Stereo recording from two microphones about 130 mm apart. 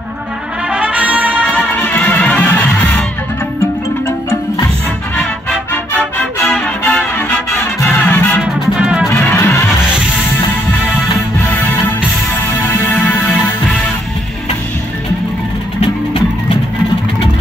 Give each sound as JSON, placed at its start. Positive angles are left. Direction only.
{"t": 0.7, "sound": "brass instrument", "side_deg": -10}
{"t": 1.8, "sound": "music", "side_deg": 10}
{"t": 5.1, "sound": "music", "side_deg": 5}
{"t": 8.4, "sound": "music", "side_deg": -5}
{"t": 9.1, "sound": "music", "side_deg": 20}
{"t": 12.9, "sound": "music", "side_deg": 10}